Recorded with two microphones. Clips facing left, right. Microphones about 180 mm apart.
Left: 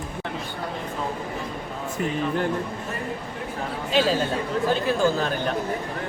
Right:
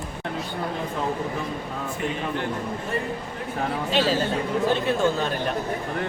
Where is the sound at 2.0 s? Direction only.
40° left (ahead or behind).